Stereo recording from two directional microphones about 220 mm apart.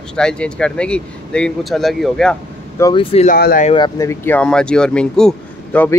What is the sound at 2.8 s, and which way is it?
Speech, 25° left (ahead or behind).